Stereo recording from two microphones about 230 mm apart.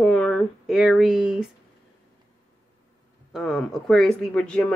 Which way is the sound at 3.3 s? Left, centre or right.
Centre.